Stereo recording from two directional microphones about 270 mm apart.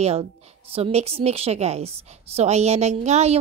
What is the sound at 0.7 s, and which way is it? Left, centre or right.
A woman's voice, right.